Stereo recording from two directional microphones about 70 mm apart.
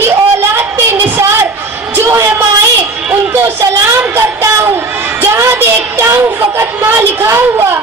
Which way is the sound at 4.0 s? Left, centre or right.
Right.